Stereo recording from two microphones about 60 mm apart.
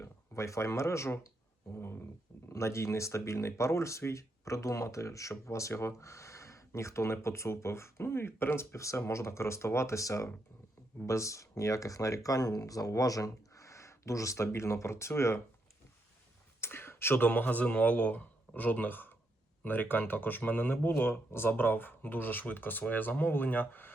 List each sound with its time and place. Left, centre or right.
0.0 s speech: left
2.5 s speech: left
8.7 s speech: left
16.6 s a sound: left
17.2 s a man's voice: left